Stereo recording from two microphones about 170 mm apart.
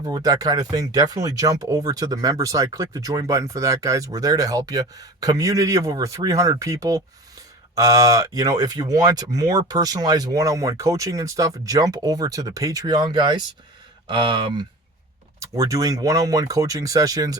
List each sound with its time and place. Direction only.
0.0 s speech: 20° right (ahead or behind)